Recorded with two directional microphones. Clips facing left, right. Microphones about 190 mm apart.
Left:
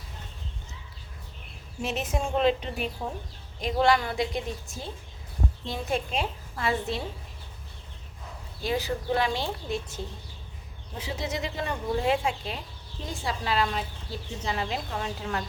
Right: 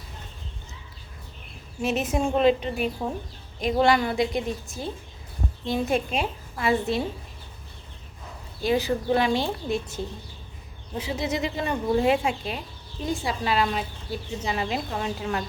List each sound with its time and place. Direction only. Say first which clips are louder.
1.8 s a woman's voice: right 5 dB; 5° right (ahead or behind)
8.6 s a woman's voice: right 5 dB; 20° right (ahead or behind)
10.9 s a woman's voice: right 5 dB; 15° right (ahead or behind)